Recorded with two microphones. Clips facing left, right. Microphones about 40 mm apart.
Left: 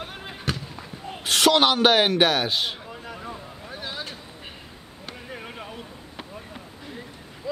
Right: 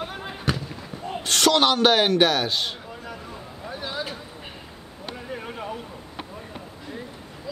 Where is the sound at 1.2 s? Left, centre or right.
Centre.